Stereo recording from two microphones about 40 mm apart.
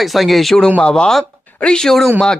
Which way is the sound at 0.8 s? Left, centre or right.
Left.